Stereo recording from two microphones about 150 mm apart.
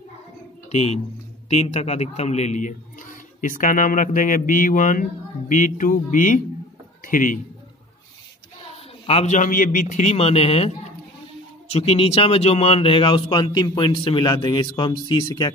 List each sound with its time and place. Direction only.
0.7 s a man's voice: 45° left (ahead or behind); by 7.3 s 60° left (ahead or behind)
9.0 s a man's voice: 45° left (ahead or behind); by 15.5 s 30° left (ahead or behind)